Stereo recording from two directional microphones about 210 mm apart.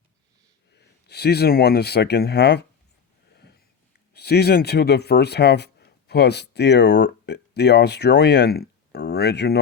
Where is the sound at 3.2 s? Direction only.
50° left (ahead or behind).